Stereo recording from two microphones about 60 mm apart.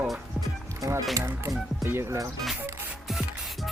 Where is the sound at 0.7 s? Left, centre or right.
Right.